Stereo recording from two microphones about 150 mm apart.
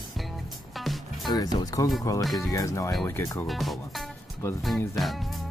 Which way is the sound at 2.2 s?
Centre (ahead or behind).